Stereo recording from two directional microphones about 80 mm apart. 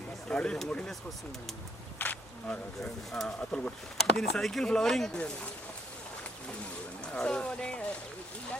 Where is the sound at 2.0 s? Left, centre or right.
Centre.